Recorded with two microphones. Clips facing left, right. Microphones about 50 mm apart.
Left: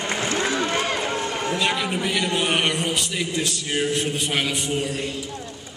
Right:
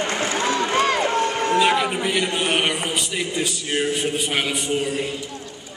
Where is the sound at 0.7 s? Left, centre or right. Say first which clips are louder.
Right 5 dB; right.